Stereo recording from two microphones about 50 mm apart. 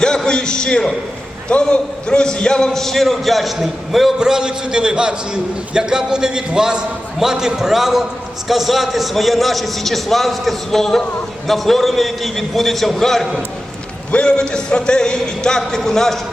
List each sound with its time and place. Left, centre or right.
0.3 s a man's voice: centre
4.2 s a man's voice: centre
14.1 s a man's voice: centre